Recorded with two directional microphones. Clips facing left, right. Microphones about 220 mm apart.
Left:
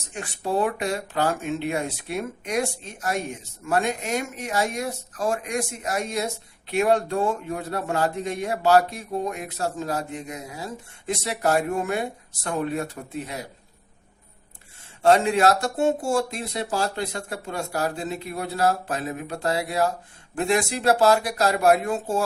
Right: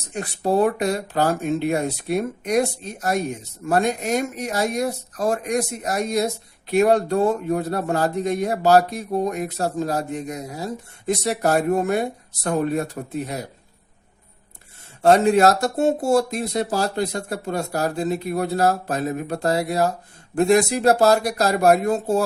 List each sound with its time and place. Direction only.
0.1 s speech: 40° right (ahead or behind)
15.0 s speech: 40° right (ahead or behind)